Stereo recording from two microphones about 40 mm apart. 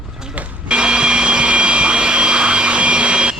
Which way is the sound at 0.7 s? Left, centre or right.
Right.